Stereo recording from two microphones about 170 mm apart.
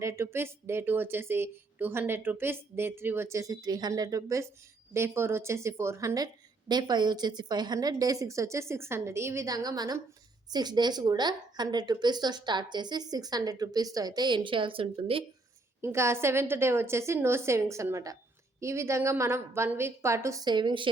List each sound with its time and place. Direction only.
0.0 s a woman's voice: 15° right (ahead or behind); by 15.2 s 35° right (ahead or behind)
15.8 s speech: 15° right (ahead or behind)